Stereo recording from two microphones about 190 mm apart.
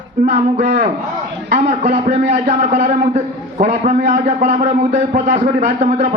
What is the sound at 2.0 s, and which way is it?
A man's voice, 40° right (ahead or behind).